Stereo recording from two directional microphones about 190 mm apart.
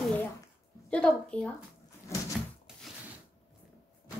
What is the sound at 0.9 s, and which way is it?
Speech, 5° left (ahead or behind).